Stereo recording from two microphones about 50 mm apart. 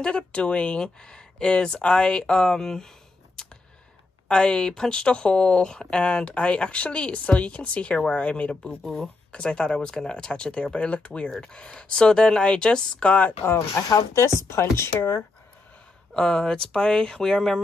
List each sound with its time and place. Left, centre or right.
0.0 s speech: left
3.4 s a sound: centre
4.3 s speech: centre
8.8 s speech: centre
9.3 s speech: centre
14.1 s speech: left
16.1 s speech: centre